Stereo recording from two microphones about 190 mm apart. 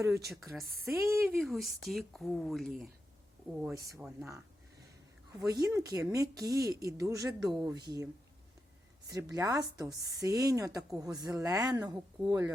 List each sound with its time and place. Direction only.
0.9 s speech: 15° right (ahead or behind)
1.4 s speech: centre (ahead or behind)
5.5 s speech: 20° right (ahead or behind)